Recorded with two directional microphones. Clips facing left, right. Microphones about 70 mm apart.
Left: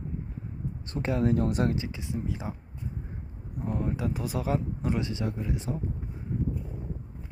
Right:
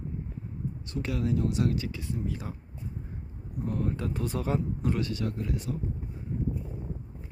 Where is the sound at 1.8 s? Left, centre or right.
Left.